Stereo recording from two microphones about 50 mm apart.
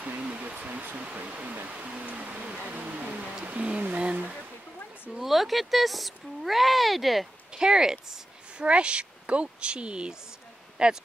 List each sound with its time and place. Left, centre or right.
0.2 s speech: right
1.7 s music: right
3.4 s speech: right
5.2 s speech: centre
7.5 s speech: centre
8.6 s a woman's voice: right